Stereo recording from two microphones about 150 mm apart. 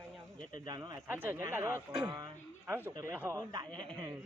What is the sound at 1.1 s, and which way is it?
Speech, 15° right (ahead or behind).